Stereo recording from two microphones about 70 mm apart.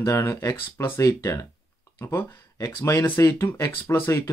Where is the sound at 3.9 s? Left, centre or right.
Left.